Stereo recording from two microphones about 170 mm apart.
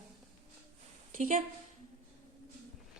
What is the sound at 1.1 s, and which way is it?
Speech, 45° right (ahead or behind).